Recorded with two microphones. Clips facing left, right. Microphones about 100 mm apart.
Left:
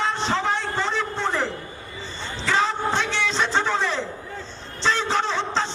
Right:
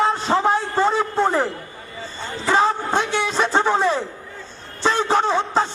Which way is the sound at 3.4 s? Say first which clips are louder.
Right 5 dB; 50° right (ahead or behind).